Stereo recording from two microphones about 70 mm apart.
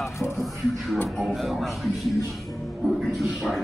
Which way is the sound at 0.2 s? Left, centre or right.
Centre.